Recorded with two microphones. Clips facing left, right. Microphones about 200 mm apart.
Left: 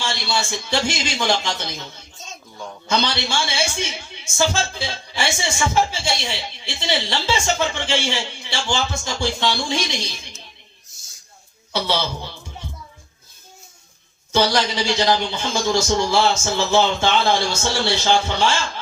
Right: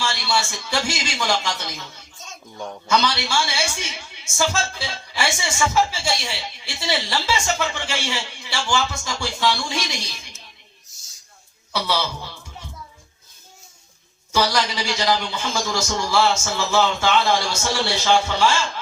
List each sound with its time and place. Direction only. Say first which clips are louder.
0.0 s a man's voice: right 1 dB; 25° left (ahead or behind)
11.7 s a man's voice: left 2 dB; 25° left (ahead or behind)
14.3 s a man's voice: left 2 dB; 25° left (ahead or behind)